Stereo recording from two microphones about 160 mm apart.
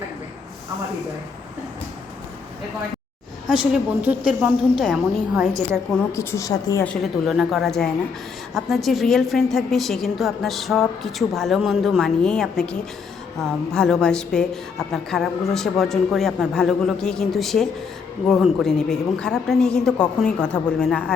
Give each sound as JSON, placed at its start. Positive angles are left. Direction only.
{"t": 3.6, "sound": "a woman's voice", "side_deg": -10}
{"t": 4.8, "sound": "a woman's voice", "side_deg": 0}
{"t": 6.1, "sound": "a woman's voice", "side_deg": 20}
{"t": 6.8, "sound": "a woman's voice", "side_deg": 0}
{"t": 13.7, "sound": "a woman's voice", "side_deg": 5}